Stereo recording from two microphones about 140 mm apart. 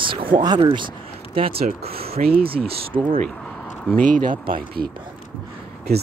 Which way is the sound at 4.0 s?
75° right (ahead or behind).